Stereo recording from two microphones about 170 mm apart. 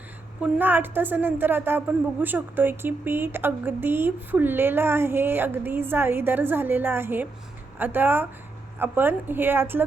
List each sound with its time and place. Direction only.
0.4 s a woman's voice: 10° right (ahead or behind)